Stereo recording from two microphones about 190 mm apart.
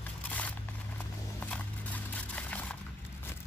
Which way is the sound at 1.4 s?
10° left (ahead or behind).